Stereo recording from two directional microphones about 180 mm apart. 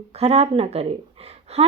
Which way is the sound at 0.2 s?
35° right (ahead or behind).